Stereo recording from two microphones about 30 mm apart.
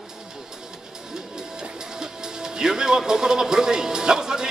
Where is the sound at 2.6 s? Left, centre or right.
Right.